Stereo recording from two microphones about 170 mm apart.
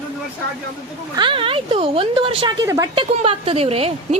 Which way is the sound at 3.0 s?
35° right (ahead or behind).